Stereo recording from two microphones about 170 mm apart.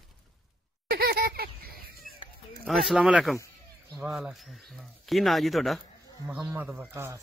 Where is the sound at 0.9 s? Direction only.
65° right (ahead or behind).